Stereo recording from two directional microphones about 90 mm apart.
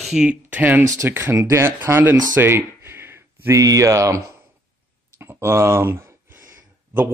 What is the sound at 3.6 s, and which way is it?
Speech, 40° right (ahead or behind).